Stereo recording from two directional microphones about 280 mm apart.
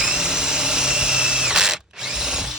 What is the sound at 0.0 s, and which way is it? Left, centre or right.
Drill, centre.